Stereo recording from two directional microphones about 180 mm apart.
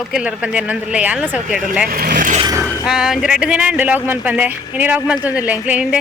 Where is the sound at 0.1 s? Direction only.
5° right (ahead or behind).